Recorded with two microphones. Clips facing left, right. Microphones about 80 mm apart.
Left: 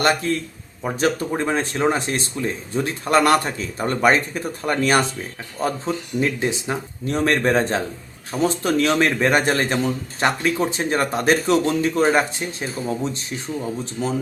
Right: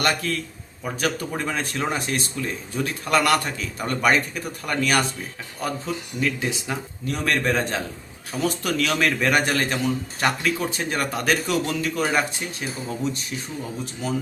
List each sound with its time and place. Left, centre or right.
0.0 s a man's voice: left
14.0 s speech: left